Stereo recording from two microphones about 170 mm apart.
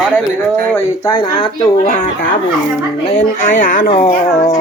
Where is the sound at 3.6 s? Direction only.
50° left (ahead or behind).